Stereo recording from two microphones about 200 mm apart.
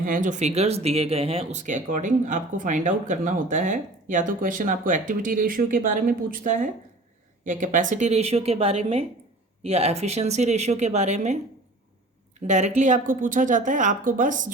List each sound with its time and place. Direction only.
0.0 s speech: 40° right (ahead or behind)
12.4 s speech: 35° right (ahead or behind)